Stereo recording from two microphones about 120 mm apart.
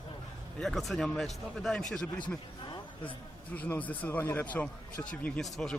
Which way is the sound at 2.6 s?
40° left (ahead or behind).